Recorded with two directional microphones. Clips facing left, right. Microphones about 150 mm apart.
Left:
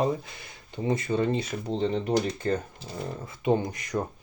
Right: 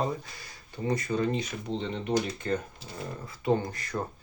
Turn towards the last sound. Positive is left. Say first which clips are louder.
# left 2 dB
turn(degrees=20)  # may be behind; listen again after turning